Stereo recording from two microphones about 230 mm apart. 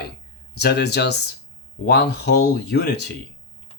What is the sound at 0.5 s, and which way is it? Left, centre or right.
Speech, left.